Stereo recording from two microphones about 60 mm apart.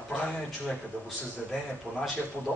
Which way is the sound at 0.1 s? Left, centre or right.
Left.